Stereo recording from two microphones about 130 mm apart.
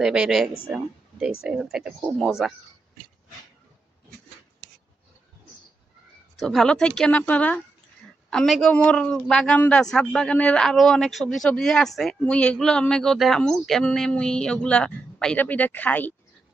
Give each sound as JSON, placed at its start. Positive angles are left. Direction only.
{"t": 0.0, "sound": "speech", "side_deg": -5}
{"t": 6.4, "sound": "a man's voice", "side_deg": 5}